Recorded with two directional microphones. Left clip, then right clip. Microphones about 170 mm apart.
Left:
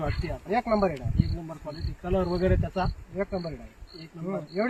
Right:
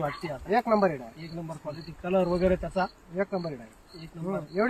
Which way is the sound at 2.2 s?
30° right (ahead or behind).